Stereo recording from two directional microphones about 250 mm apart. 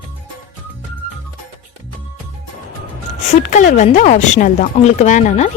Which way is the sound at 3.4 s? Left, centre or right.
Left.